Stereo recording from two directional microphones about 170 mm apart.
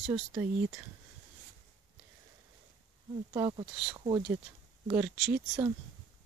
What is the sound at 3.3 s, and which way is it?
Speech, 25° right (ahead or behind).